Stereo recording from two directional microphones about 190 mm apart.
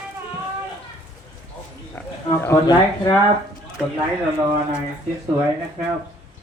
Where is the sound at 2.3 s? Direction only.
15° left (ahead or behind).